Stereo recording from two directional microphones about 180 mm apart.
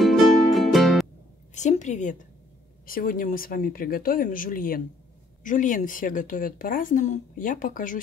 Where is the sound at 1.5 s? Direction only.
40° left (ahead or behind).